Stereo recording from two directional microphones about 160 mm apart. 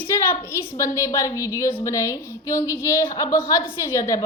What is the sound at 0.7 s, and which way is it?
A woman's voice, 20° left (ahead or behind).